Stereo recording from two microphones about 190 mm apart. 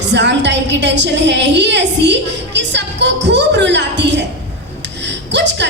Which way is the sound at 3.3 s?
65° right (ahead or behind).